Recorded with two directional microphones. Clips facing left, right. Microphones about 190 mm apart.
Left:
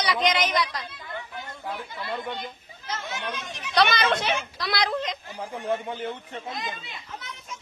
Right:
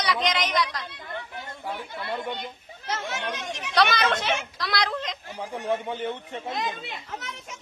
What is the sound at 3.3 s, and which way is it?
Speech, 75° right (ahead or behind).